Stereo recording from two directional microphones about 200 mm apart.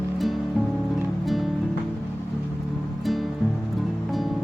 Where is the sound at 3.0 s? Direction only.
Centre (ahead or behind).